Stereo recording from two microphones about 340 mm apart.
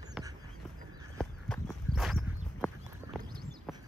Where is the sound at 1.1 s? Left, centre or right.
Centre.